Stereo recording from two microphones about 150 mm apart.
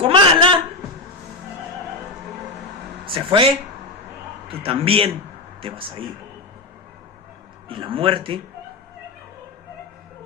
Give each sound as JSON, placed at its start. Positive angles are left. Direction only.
{"t": 0.0, "sound": "a sound", "side_deg": -35}
{"t": 3.1, "sound": "a man's voice", "side_deg": -35}
{"t": 4.6, "sound": "a man's voice", "side_deg": -40}
{"t": 7.7, "sound": "a man's voice", "side_deg": -35}